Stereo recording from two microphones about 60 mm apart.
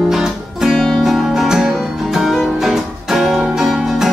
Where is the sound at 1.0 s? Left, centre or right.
Centre.